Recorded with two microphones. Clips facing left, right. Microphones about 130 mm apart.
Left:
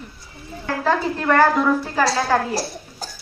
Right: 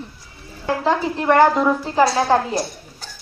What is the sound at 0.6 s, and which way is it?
A woman's voice, 20° right (ahead or behind).